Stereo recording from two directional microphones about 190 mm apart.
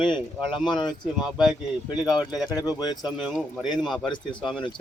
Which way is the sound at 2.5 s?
20° left (ahead or behind).